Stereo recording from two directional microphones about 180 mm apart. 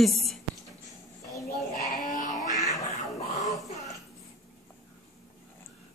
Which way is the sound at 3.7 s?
40° left (ahead or behind).